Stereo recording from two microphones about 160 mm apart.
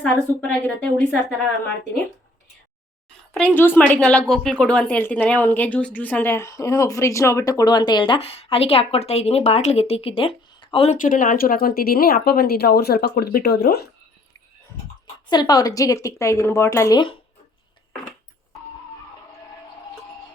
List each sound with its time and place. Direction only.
0.0 s a woman's voice: 10° left (ahead or behind)
3.5 s a woman's voice: 10° left (ahead or behind); by 10.9 s 35° left (ahead or behind)
10.9 s speech: 55° left (ahead or behind); by 13.8 s 90° left
15.3 s a woman's voice: 25° left (ahead or behind)